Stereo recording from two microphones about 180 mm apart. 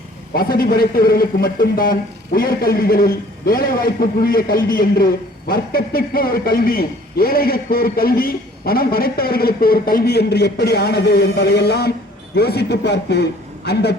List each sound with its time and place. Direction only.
0.3 s a man's voice: 55° left (ahead or behind)